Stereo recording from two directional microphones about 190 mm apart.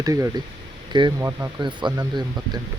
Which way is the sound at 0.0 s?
15° right (ahead or behind).